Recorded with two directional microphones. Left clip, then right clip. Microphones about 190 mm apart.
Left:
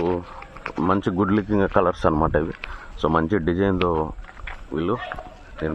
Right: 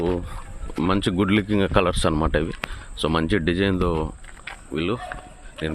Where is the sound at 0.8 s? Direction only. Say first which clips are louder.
Left 1 dB; 30° right (ahead or behind).